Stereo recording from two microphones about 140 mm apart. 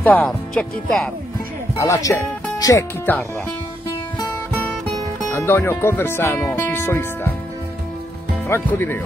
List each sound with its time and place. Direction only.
0.0 s speech: 10° left (ahead or behind)
1.8 s speech: 20° left (ahead or behind)
4.5 s music: 10° left (ahead or behind)
5.3 s speech: 15° left (ahead or behind)
8.5 s speech: 15° left (ahead or behind)